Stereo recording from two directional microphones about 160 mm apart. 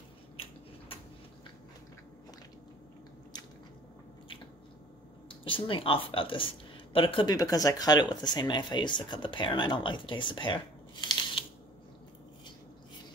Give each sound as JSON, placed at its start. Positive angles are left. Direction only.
{"t": 5.4, "sound": "speech", "side_deg": 35}